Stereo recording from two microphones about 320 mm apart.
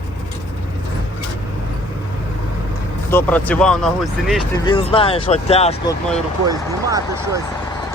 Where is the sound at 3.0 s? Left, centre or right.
Centre.